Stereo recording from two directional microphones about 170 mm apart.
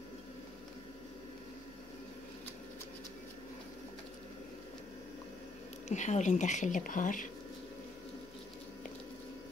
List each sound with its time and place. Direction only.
5.9 s speech: 45° left (ahead or behind)